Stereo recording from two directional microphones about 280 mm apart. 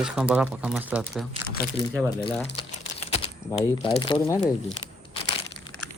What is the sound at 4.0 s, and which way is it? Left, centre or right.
Speech, centre.